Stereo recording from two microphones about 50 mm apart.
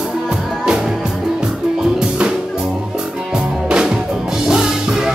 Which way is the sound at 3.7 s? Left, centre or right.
Centre.